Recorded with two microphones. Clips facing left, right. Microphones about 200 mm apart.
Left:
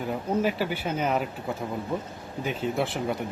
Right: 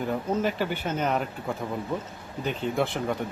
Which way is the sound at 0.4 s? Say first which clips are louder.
Even; 5° left (ahead or behind).